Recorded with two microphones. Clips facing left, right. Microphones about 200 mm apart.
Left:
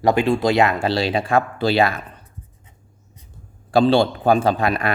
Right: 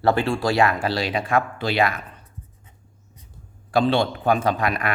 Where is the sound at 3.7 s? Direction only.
30° left (ahead or behind).